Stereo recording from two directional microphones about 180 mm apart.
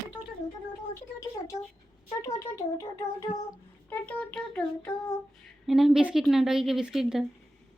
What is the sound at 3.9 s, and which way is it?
Child singing, 5° left (ahead or behind).